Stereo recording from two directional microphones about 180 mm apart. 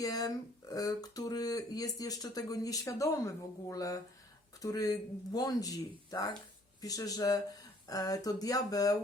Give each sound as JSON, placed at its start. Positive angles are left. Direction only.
{"t": 0.0, "sound": "speech", "side_deg": 20}